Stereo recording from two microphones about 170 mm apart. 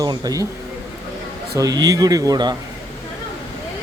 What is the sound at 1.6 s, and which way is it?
Speech, 20° right (ahead or behind).